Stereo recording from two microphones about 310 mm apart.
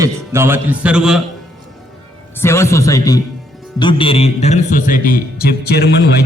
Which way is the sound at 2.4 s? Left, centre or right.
Centre.